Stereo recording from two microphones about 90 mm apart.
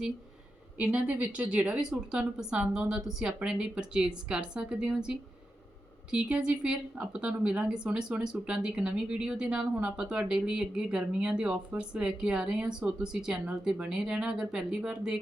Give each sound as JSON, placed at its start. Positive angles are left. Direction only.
{"t": 0.8, "sound": "speech", "side_deg": -15}